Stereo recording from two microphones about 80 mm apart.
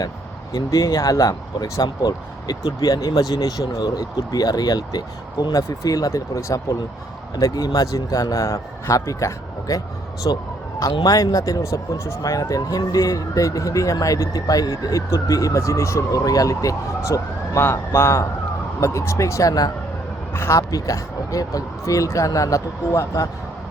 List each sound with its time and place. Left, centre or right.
0.5 s speech: left
1.8 s speech: left
10.3 s speech: left
20.3 s speech: left
20.6 s speech: left